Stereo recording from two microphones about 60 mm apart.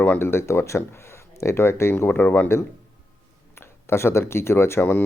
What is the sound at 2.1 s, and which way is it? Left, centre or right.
Speech, left.